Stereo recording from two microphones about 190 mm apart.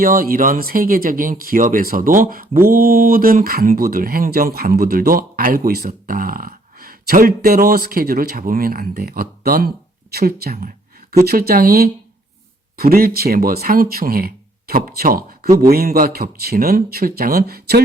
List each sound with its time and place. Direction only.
0.0 s speech: 50° right (ahead or behind)